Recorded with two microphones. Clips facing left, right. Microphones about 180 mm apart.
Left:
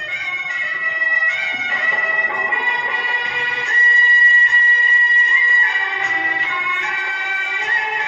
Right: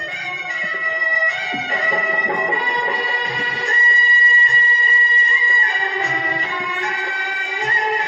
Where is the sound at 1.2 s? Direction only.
35° right (ahead or behind).